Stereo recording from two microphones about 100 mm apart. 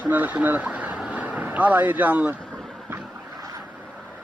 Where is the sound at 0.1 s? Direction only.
15° right (ahead or behind).